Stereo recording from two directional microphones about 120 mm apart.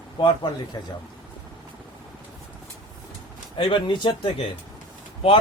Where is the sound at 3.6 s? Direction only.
45° left (ahead or behind).